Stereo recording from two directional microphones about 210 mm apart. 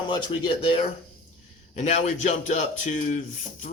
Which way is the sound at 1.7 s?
30° left (ahead or behind).